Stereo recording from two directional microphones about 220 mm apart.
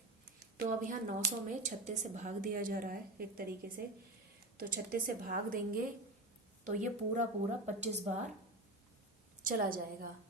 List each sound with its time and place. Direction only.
0.5 s a woman's voice: 40° right (ahead or behind)
9.4 s a woman's voice: 40° right (ahead or behind)